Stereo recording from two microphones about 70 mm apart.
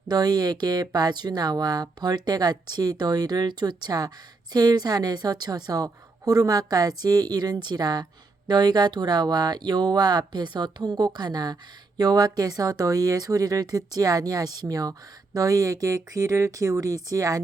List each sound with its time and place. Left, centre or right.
0.1 s speech: right
8.4 s speech: right